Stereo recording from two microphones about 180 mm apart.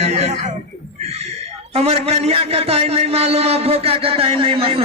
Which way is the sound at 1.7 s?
35° right (ahead or behind).